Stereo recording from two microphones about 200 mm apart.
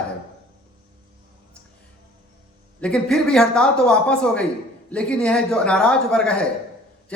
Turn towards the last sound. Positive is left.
turn(degrees=5)  # may be behind; listen again after turning